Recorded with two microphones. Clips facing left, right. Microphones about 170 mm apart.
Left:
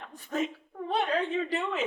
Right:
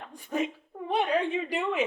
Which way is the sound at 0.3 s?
10° right (ahead or behind).